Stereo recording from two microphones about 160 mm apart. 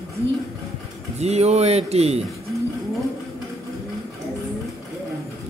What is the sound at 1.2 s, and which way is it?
Speech, 40° right (ahead or behind).